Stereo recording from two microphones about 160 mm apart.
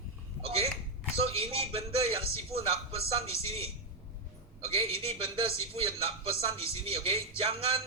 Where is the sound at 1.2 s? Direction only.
35° right (ahead or behind).